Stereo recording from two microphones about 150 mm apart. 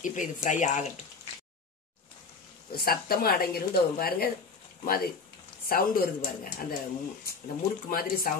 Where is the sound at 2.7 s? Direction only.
90° left.